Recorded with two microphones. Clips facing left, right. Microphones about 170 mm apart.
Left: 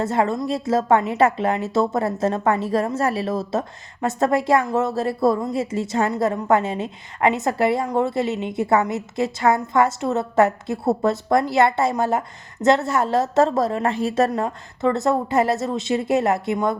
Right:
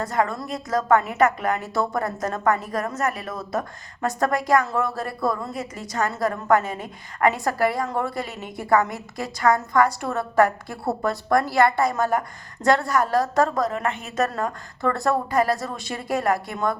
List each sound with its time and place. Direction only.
0.0 s a woman's voice: 25° left (ahead or behind)
14.3 s a woman's voice: 20° left (ahead or behind)